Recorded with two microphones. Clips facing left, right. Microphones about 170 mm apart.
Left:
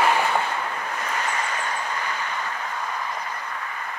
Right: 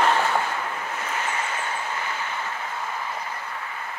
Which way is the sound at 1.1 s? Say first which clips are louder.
Left 1 dB; 35° left (ahead or behind).